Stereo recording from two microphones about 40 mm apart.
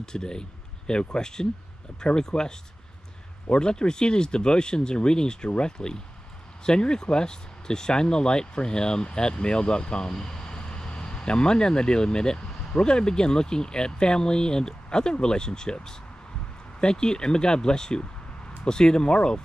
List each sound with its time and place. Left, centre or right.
0.0 s speech: centre